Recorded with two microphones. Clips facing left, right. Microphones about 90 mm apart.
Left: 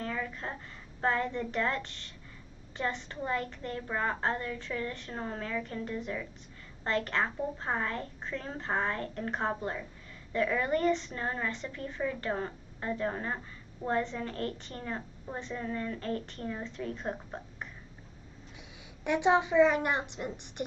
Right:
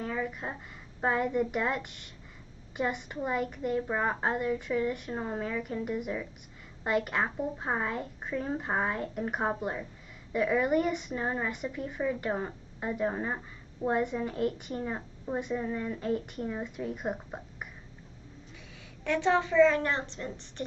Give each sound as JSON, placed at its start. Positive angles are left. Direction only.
{"t": 0.0, "sound": "a sound", "side_deg": -10}
{"t": 1.0, "sound": "a woman's voice", "side_deg": -10}
{"t": 19.0, "sound": "a woman's voice", "side_deg": 15}